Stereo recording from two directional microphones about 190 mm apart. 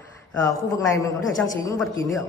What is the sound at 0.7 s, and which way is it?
Speech, 15° left (ahead or behind).